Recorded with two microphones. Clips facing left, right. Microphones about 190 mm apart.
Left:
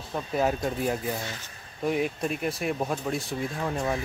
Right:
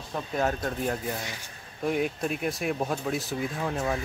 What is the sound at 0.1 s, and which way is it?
Speech, 5° left (ahead or behind).